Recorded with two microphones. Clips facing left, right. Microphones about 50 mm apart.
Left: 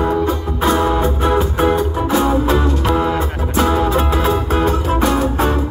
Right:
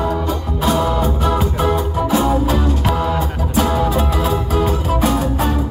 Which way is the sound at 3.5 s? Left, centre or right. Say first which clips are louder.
Left 2 dB; left.